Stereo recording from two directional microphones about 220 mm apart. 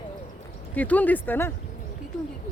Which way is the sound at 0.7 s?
5° left (ahead or behind).